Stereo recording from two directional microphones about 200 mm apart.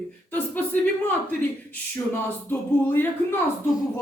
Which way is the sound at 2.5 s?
10° left (ahead or behind).